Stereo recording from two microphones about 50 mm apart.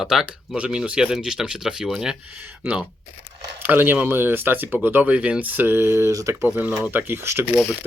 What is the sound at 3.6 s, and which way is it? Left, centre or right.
Speech, right.